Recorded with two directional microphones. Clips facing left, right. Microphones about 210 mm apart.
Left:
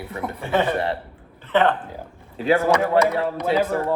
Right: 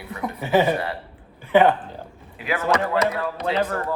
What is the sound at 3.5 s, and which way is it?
Speech, centre (ahead or behind).